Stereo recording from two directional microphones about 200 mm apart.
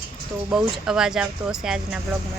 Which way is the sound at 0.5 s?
5° right (ahead or behind).